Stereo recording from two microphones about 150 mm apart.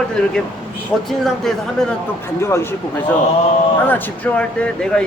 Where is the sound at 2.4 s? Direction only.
15° left (ahead or behind).